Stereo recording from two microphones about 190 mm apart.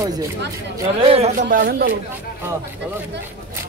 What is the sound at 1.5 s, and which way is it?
Speech, 50° right (ahead or behind).